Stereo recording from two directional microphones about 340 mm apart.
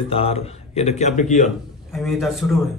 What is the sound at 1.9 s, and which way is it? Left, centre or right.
Speech, centre.